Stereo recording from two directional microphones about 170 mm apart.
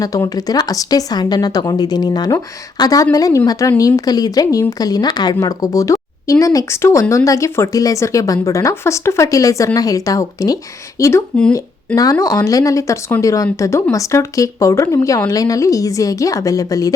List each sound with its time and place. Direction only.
0.0 s a woman's voice: 20° left (ahead or behind)
11.3 s speech: 5° left (ahead or behind)
12.2 s a woman's voice: 20° left (ahead or behind)